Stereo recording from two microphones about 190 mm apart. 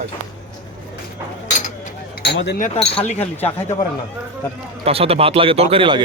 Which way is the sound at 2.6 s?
40° left (ahead or behind).